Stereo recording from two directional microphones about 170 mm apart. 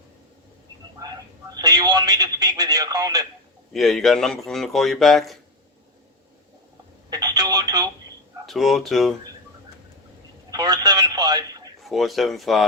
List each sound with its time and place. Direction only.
1.6 s speech: 25° right (ahead or behind)
3.7 s speech: centre (ahead or behind)
7.1 s speech: 25° right (ahead or behind)
8.4 s speech: centre (ahead or behind)
10.5 s speech: 25° right (ahead or behind)
11.8 s speech: centre (ahead or behind)